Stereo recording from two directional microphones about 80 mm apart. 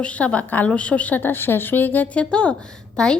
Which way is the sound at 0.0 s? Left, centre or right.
Centre.